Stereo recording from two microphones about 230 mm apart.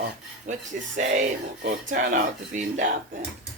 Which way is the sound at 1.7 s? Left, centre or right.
Right.